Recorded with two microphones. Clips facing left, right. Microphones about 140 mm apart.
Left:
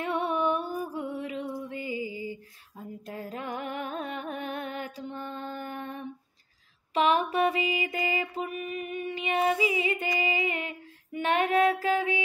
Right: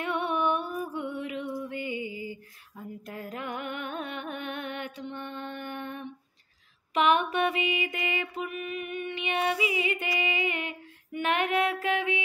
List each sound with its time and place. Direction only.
0.0 s music: 35° left (ahead or behind)
6.9 s mantra: 35° left (ahead or behind)